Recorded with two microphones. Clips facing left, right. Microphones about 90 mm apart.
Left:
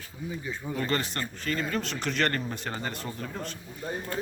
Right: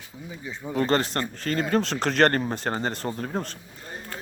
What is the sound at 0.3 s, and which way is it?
Speech, 15° right (ahead or behind).